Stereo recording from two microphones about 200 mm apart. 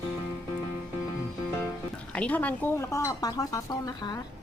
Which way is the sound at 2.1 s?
5° left (ahead or behind).